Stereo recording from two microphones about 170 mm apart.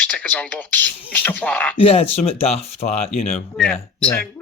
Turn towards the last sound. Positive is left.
turn(degrees=5)  # may be behind; listen again after turning